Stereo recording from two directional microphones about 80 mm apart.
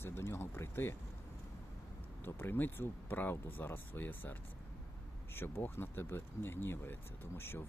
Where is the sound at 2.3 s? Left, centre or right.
Left.